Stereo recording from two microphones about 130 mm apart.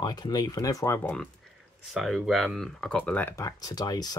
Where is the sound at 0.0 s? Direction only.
30° left (ahead or behind).